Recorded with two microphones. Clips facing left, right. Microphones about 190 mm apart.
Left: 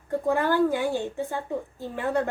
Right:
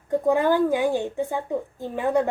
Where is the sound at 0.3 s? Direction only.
15° right (ahead or behind).